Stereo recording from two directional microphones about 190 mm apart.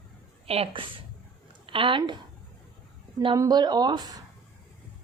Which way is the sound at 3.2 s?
20° right (ahead or behind).